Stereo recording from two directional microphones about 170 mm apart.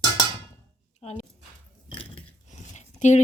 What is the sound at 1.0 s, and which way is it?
Speech, 40° left (ahead or behind).